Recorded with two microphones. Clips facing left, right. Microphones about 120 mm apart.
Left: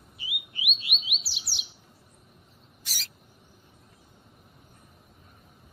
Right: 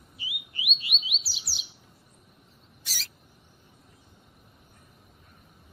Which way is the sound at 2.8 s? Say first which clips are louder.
Even; 15° left (ahead or behind).